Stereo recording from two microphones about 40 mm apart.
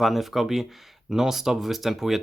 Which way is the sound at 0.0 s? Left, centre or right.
Centre.